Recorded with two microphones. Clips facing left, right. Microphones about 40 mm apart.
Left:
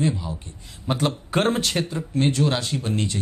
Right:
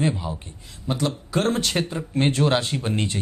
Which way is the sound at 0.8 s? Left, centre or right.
Left.